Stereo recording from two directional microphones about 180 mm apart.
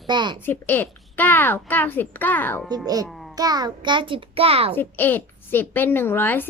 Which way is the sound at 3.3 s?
20° right (ahead or behind).